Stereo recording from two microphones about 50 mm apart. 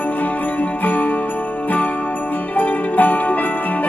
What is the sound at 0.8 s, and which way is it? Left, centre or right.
Jingle bell, left.